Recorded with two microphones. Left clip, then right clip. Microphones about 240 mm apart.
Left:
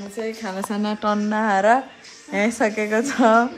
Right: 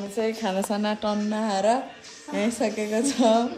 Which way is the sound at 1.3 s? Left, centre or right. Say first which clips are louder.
Left 7 dB; left.